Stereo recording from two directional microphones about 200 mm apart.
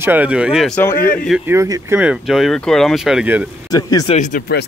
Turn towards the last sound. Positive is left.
turn(degrees=35)  # may be behind; listen again after turning